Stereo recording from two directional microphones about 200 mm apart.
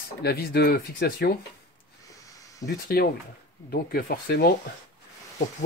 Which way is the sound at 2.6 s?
50° left (ahead or behind).